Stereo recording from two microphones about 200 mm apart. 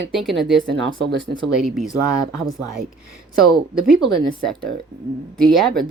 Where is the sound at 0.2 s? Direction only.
Centre (ahead or behind).